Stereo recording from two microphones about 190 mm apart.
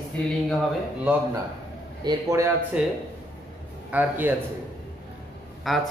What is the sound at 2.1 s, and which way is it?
Speech, 15° right (ahead or behind).